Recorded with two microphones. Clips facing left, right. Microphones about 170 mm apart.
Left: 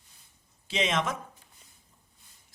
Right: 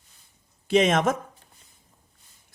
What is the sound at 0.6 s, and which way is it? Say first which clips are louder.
Speech: right 9 dB; 50° right (ahead or behind).